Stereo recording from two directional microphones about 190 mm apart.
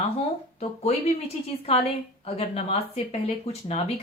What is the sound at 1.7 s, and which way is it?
Speech, 30° left (ahead or behind).